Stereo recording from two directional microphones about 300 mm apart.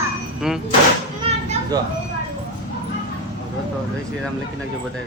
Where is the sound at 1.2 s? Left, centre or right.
Centre.